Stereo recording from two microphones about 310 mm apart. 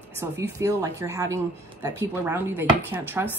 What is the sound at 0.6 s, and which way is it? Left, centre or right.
Speech, centre.